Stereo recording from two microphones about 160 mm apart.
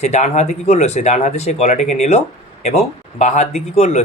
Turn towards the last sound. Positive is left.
turn(degrees=45)  # may be behind; listen again after turning